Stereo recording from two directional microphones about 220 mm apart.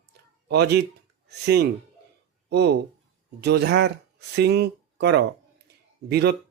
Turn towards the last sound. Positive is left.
turn(degrees=-50)  # may be behind; listen again after turning